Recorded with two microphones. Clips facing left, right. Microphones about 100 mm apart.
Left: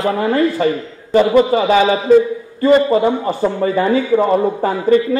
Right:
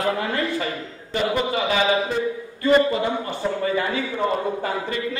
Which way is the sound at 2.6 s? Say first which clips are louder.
Left 7 dB; 35° left (ahead or behind).